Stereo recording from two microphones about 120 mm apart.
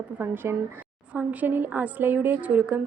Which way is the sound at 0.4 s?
20° right (ahead or behind).